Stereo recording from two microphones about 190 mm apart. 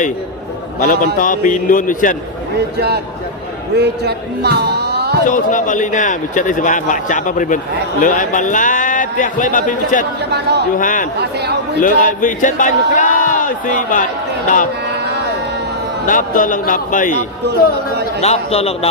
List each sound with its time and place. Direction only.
0.8 s a man's voice: 45° left (ahead or behind)
2.7 s speech: 60° right (ahead or behind)
5.2 s a man's voice: 45° left (ahead or behind)
10.2 s speech: 60° right (ahead or behind)
10.8 s a man's voice: 45° left (ahead or behind)
11.2 s speech: 60° right (ahead or behind)
11.8 s a man's voice: 45° left (ahead or behind)
16.0 s a man's voice: 45° left (ahead or behind)
18.2 s a man's voice: 35° left (ahead or behind)